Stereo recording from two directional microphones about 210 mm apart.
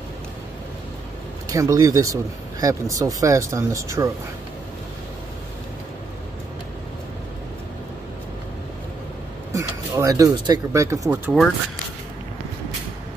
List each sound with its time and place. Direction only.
1.5 s speech: 15° right (ahead or behind)
9.5 s speech: 15° right (ahead or behind)